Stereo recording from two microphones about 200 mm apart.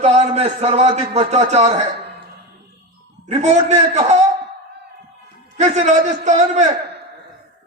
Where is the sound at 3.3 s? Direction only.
35° right (ahead or behind).